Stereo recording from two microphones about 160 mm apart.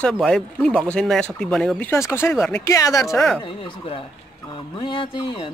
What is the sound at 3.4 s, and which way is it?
Speech, 35° left (ahead or behind).